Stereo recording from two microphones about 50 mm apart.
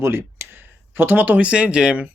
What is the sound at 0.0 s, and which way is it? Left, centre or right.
Speech, right.